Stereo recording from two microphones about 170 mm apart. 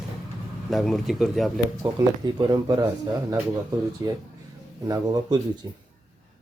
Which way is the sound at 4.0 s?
20° right (ahead or behind).